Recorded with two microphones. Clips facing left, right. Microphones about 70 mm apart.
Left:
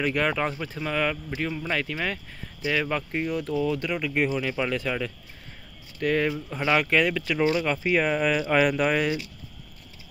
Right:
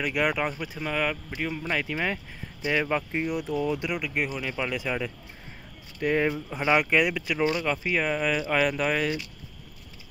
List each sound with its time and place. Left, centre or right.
0.0 s speech: centre
4.1 s speech: centre
4.7 s speech: centre
7.5 s speech: centre